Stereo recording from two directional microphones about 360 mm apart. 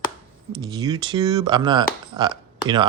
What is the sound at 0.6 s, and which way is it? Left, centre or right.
Speech, centre.